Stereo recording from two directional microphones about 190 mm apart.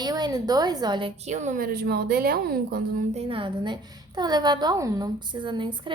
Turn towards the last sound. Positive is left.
turn(degrees=-25)  # may be behind; listen again after turning